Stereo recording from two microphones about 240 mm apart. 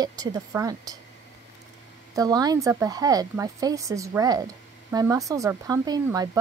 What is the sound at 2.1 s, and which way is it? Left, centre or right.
Speech, centre.